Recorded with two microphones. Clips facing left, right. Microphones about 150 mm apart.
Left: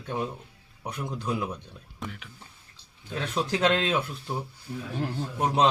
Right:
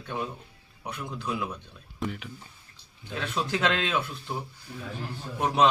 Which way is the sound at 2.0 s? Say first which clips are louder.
Right 6 dB; 5° right (ahead or behind).